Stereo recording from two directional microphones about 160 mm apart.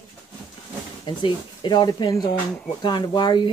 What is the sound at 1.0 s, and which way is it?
Speech, 30° left (ahead or behind).